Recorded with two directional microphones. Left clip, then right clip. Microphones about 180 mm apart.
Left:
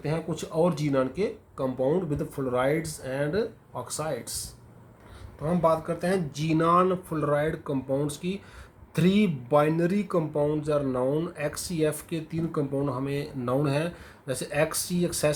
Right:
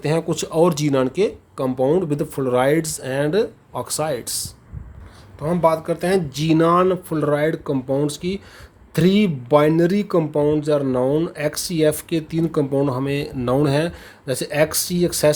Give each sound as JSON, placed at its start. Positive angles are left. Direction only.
{"t": 0.0, "sound": "speech", "side_deg": -55}